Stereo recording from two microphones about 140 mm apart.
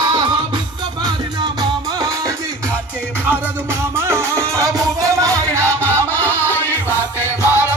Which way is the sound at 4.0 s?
20° right (ahead or behind).